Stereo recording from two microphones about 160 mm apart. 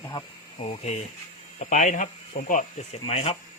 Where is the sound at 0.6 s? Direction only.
40° left (ahead or behind).